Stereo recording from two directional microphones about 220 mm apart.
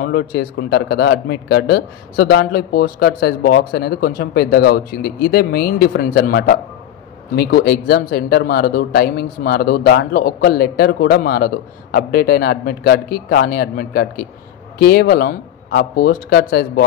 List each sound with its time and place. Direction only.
0.0 s speech: 45° left (ahead or behind)